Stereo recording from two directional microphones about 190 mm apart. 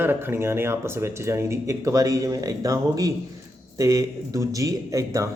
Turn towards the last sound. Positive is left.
turn(degrees=-15)  # may be behind; listen again after turning